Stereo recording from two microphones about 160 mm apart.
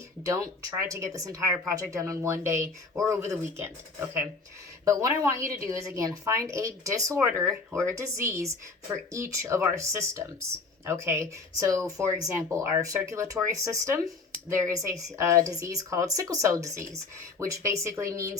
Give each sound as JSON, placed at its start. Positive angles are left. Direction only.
{"t": 0.8, "sound": "a woman's voice", "side_deg": -20}
{"t": 4.9, "sound": "a woman's voice", "side_deg": -20}